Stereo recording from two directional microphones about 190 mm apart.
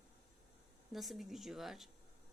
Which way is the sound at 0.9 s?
Centre (ahead or behind).